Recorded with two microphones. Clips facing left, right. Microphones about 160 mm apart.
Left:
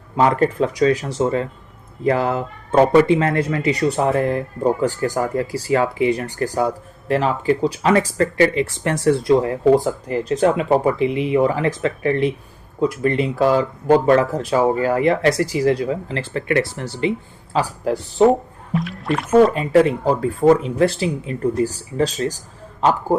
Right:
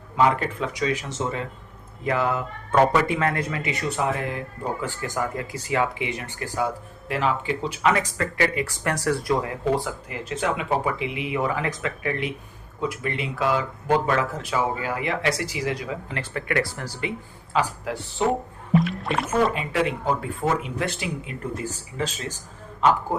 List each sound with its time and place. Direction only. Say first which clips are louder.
0.2 s speech: left 5 dB; 40° left (ahead or behind)
17.5 s speech: left 5 dB; 40° left (ahead or behind)
18.7 s rowboat: even; centre (ahead or behind)
19.5 s speech: left 10 dB; 40° left (ahead or behind)